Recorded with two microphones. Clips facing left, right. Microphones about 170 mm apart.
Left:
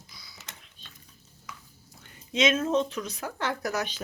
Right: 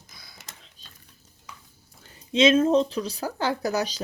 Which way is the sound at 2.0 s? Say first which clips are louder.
Right 6 dB; 30° right (ahead or behind).